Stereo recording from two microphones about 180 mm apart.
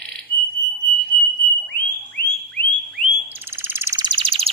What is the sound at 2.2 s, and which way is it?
Frog, 60° left (ahead or behind).